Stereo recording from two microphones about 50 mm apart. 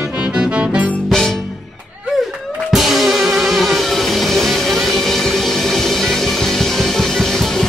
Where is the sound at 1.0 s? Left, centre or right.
Centre.